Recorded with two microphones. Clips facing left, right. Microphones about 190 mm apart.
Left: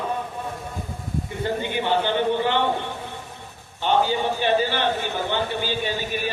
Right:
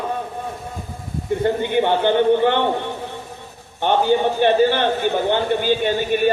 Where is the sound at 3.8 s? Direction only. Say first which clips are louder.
Right 4 dB; 55° right (ahead or behind).